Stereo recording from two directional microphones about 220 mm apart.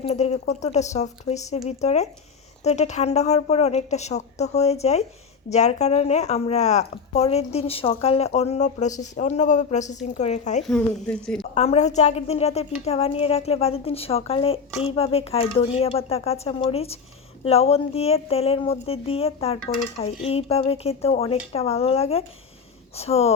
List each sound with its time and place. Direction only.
0.0 s speech: 30° left (ahead or behind)
10.6 s speech: centre (ahead or behind)
11.5 s speech: 30° left (ahead or behind)